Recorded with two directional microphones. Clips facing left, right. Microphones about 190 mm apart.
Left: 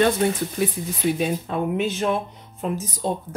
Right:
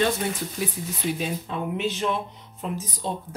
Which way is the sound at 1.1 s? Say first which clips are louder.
Left 5 dB; 50° left (ahead or behind).